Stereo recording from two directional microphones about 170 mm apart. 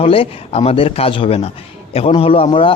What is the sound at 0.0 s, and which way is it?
A man's voice, 35° left (ahead or behind).